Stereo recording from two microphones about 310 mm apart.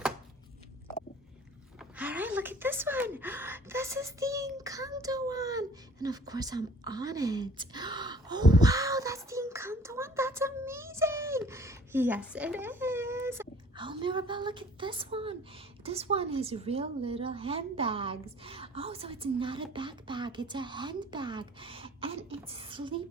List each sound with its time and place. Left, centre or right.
1.8 s speech: centre